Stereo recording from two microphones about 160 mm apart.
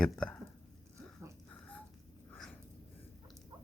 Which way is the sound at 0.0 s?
5° left (ahead or behind).